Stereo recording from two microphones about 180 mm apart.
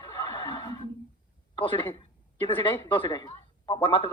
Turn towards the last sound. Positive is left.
turn(degrees=25)  # may be behind; listen again after turning